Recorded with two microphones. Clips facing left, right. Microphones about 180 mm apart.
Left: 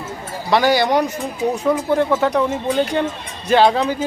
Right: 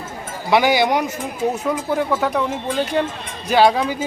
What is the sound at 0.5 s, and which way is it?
Speech, 15° right (ahead or behind).